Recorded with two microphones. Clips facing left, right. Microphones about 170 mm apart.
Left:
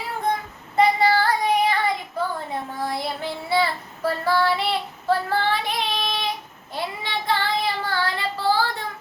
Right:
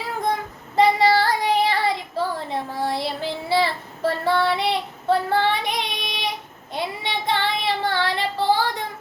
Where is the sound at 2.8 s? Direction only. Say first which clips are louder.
Right 2 dB; 30° right (ahead or behind).